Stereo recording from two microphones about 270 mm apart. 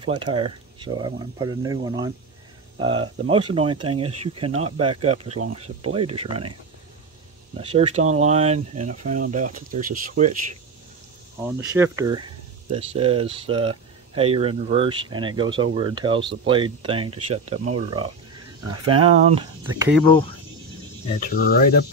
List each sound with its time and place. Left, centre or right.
0.0 s speech: centre
7.5 s speech: right
11.7 s speech: centre
19.0 s speech: centre
20.1 s speech: centre
21.1 s speech: left